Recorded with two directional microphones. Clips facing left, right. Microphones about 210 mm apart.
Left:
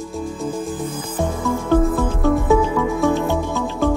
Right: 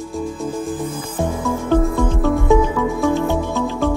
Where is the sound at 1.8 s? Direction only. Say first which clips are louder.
Even; centre (ahead or behind).